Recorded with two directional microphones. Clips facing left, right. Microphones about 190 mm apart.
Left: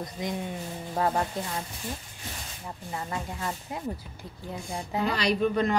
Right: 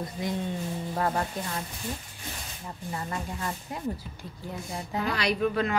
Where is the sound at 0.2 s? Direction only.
20° left (ahead or behind).